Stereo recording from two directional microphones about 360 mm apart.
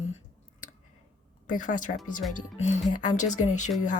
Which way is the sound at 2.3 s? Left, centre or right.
Left.